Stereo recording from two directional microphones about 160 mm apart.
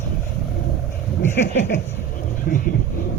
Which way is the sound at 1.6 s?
90° left.